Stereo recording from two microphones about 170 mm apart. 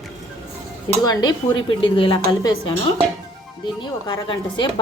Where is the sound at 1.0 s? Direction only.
25° left (ahead or behind).